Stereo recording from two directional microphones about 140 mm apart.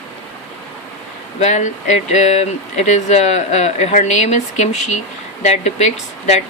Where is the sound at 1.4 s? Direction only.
55° left (ahead or behind).